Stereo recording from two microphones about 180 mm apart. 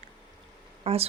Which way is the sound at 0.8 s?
35° right (ahead or behind).